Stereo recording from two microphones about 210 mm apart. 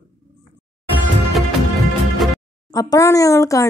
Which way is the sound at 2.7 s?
15° left (ahead or behind).